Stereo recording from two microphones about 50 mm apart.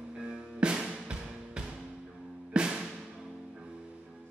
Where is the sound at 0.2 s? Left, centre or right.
Centre.